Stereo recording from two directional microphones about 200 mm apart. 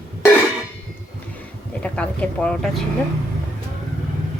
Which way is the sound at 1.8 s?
5° left (ahead or behind).